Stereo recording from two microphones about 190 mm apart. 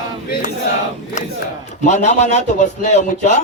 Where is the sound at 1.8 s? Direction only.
40° left (ahead or behind).